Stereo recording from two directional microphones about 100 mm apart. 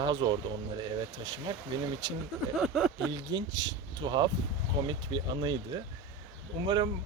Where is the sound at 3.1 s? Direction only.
45° right (ahead or behind).